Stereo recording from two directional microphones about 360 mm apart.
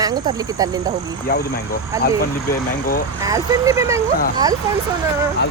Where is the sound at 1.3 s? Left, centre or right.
Left.